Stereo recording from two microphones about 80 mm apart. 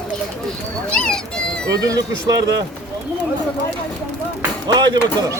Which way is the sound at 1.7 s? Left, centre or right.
Right.